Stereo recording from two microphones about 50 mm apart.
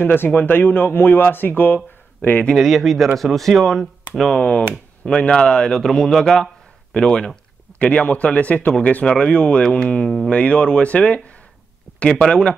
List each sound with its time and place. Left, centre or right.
0.0 s speech: left
2.5 s speech: centre
4.4 s a man's voice: left; by 6.5 s centre
6.9 s a man's voice: centre
9.0 s speech: centre
10.0 s a man's voice: centre
10.3 s speech: left
12.0 s a man's voice: centre